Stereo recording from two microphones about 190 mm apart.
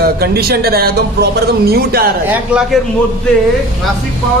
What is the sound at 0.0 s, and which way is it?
Speech, 55° right (ahead or behind).